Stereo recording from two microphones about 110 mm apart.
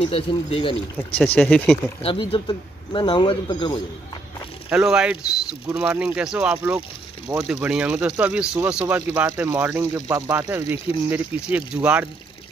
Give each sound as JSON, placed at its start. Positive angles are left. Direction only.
{"t": 0.0, "sound": "speech", "side_deg": 60}
{"t": 1.1, "sound": "speech", "side_deg": 10}
{"t": 1.4, "sound": "speech", "side_deg": 0}
{"t": 2.0, "sound": "speech", "side_deg": 50}
{"t": 4.6, "sound": "speech", "side_deg": -5}
{"t": 9.8, "sound": "speech", "side_deg": -30}
{"t": 10.5, "sound": "speech", "side_deg": -15}